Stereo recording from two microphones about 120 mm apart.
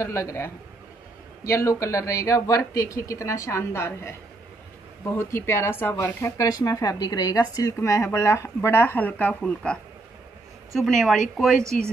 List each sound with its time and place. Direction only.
0.0 s speech: 25° left (ahead or behind)
5.1 s speech: 25° left (ahead or behind); by 11.6 s 5° left (ahead or behind)